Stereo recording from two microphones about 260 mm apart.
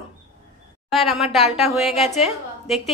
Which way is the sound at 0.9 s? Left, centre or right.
Centre.